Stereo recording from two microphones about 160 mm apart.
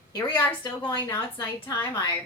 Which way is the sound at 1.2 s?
15° left (ahead or behind).